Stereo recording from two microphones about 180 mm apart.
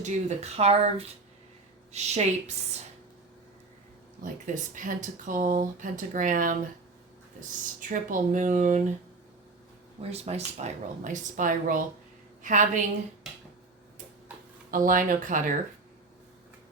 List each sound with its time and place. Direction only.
0.0 s speech: 35° right (ahead or behind)
4.2 s speech: 45° right (ahead or behind)
7.8 s speech: 45° right (ahead or behind)
10.0 s a woman's voice: 35° right (ahead or behind)
14.7 s speech: 50° right (ahead or behind)